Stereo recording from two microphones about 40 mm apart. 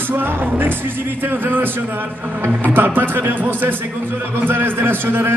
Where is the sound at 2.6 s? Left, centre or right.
Right.